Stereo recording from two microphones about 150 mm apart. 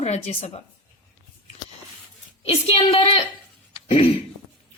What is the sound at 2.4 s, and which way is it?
Speech, 40° left (ahead or behind).